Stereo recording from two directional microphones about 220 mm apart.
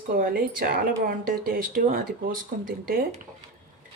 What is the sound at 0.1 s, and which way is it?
Speech, 40° right (ahead or behind).